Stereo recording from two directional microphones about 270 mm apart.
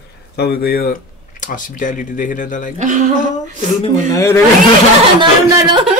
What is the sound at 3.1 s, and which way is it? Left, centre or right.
Speech, left.